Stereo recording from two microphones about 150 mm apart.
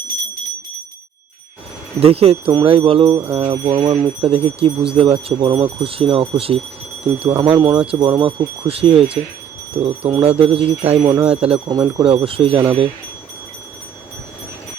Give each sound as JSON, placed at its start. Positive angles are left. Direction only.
{"t": 2.0, "sound": "speech", "side_deg": -40}
{"t": 3.3, "sound": "a sound", "side_deg": -35}
{"t": 4.2, "sound": "speech", "side_deg": -40}
{"t": 11.0, "sound": "speech", "side_deg": -20}
{"t": 11.3, "sound": "speech", "side_deg": -40}
{"t": 11.7, "sound": "speech", "side_deg": -30}